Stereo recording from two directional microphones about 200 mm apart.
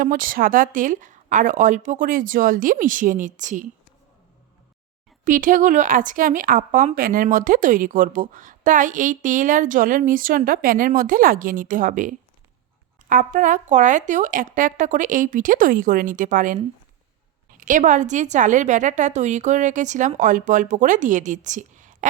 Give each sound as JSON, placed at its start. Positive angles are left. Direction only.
{"t": 0.0, "sound": "speech", "side_deg": -45}
{"t": 5.2, "sound": "speech", "side_deg": -40}
{"t": 17.6, "sound": "speech", "side_deg": -40}